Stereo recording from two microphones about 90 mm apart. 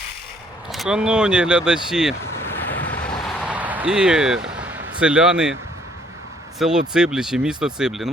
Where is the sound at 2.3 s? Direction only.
25° left (ahead or behind).